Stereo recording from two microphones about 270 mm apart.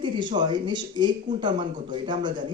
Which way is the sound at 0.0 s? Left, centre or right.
Centre.